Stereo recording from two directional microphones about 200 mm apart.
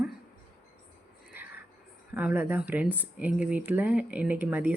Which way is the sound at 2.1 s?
10° right (ahead or behind).